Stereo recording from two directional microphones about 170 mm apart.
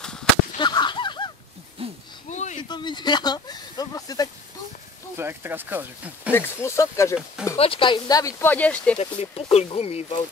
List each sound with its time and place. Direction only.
0.0 s whip: 5° left (ahead or behind)
0.6 s whip: 25° left (ahead or behind)
1.8 s a sound: 35° right (ahead or behind)
2.2 s a sound: 45° left (ahead or behind)
2.7 s speech: 25° left (ahead or behind)
5.1 s speech: 15° right (ahead or behind)
6.3 s speech: 15° left (ahead or behind)
7.5 s speech: 35° left (ahead or behind); by 8.9 s 10° left (ahead or behind)
8.9 s speech: 40° left (ahead or behind)